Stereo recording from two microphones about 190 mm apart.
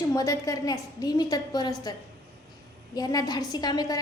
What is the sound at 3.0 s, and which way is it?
A woman's voice, 20° left (ahead or behind).